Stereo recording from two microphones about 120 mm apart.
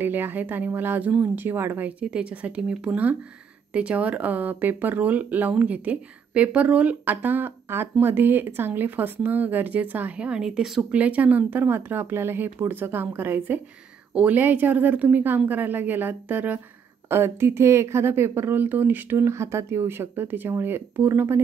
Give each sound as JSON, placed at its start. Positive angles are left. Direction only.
{"t": 0.0, "sound": "speech", "side_deg": -15}